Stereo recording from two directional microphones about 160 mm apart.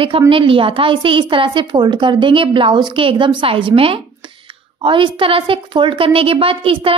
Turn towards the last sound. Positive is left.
turn(degrees=-35)  # may be behind; listen again after turning